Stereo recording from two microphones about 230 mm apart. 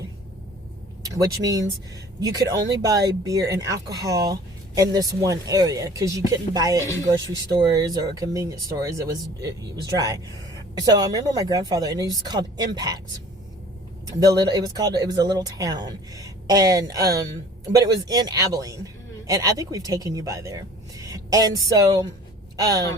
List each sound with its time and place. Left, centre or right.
1.0 s speech: centre
14.1 s speech: centre